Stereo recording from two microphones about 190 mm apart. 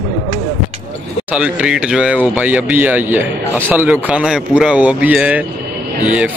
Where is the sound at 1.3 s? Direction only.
5° right (ahead or behind).